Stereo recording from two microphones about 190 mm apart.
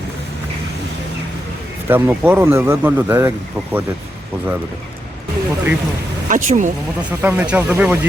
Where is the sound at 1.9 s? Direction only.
10° right (ahead or behind).